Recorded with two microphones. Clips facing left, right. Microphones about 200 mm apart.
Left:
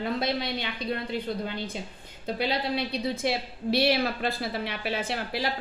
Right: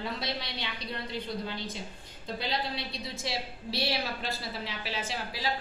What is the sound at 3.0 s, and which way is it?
A woman's voice, 55° left (ahead or behind).